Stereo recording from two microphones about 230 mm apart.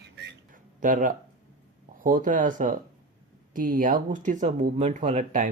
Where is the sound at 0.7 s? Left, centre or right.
Right.